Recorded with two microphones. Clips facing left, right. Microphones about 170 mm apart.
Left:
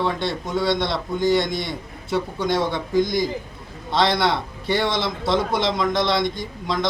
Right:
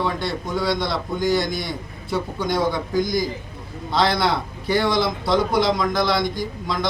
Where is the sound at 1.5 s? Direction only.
25° left (ahead or behind).